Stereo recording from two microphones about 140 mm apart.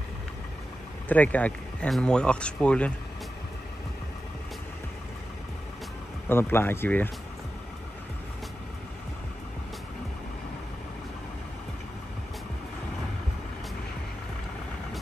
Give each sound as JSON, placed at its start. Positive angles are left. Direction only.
{"t": 1.0, "sound": "speech", "side_deg": 10}
{"t": 6.2, "sound": "speech", "side_deg": 15}